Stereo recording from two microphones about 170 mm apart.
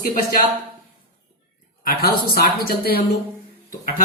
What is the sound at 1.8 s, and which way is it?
Speech, 65° left (ahead or behind).